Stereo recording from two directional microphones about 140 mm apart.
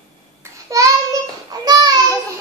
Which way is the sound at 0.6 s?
25° right (ahead or behind).